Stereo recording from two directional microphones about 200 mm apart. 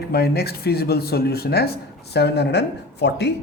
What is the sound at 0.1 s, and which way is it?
Speech, 50° left (ahead or behind).